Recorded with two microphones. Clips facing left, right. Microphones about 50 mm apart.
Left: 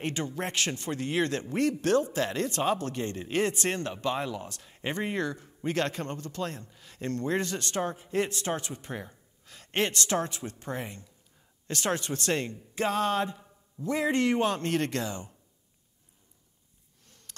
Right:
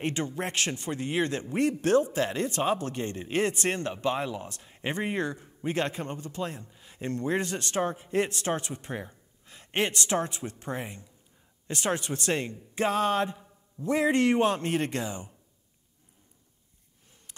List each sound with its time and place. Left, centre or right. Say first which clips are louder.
0.0 s speech: right 1 dB; right
12.7 s music: right 2 dB; right
13.8 s speech: right 3 dB; right; by 15.3 s centre
17.3 s a sound: left 1 dB; centre